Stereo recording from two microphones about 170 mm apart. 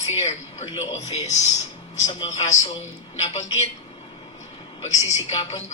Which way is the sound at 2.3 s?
40° left (ahead or behind).